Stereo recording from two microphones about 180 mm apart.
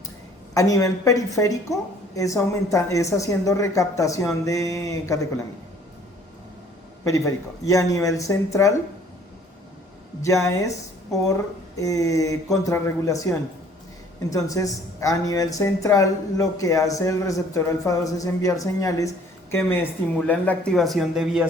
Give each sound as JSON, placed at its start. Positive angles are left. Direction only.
{"t": 0.5, "sound": "speech", "side_deg": 20}
{"t": 7.0, "sound": "speech", "side_deg": 20}
{"t": 10.2, "sound": "speech", "side_deg": 15}